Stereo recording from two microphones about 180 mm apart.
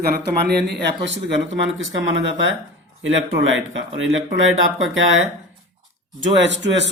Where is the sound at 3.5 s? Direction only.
90° right.